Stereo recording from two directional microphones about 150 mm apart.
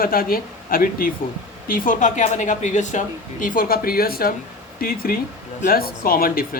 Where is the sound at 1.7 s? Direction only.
60° left (ahead or behind).